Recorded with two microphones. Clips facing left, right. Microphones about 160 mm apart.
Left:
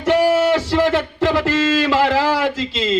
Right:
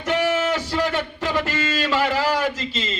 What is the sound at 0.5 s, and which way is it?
Speech, 90° left.